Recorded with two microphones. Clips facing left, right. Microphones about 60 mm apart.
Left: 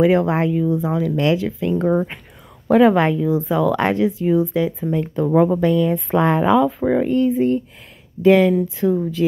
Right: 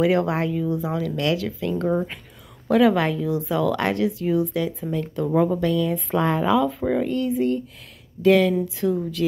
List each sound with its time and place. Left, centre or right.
0.0 s speech: centre